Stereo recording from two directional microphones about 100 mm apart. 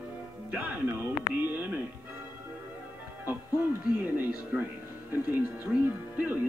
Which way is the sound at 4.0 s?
20° right (ahead or behind).